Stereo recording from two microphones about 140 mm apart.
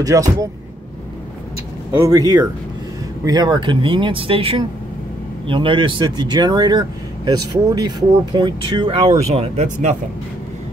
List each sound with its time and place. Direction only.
0.0 s speech: 25° right (ahead or behind)
2.0 s speech: 25° right (ahead or behind)
9.3 s speech: 55° right (ahead or behind)